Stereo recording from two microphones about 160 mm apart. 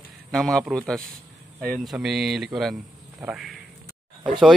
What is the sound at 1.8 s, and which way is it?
Speech, centre (ahead or behind).